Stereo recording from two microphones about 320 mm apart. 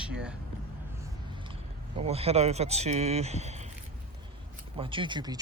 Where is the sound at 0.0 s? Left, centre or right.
Centre.